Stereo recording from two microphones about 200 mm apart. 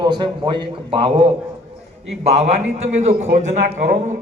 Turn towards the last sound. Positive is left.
turn(degrees=-40)  # may be behind; listen again after turning